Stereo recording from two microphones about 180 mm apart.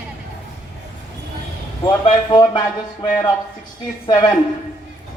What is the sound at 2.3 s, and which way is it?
Speech, 25° left (ahead or behind).